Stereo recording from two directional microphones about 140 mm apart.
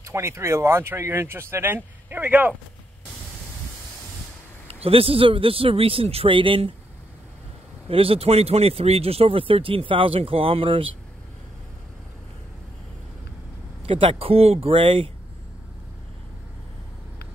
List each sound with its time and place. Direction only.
0.0 s speech: 20° right (ahead or behind)
4.6 s speech: 45° right (ahead or behind)
7.9 s speech: 40° right (ahead or behind)
13.8 s speech: 40° right (ahead or behind)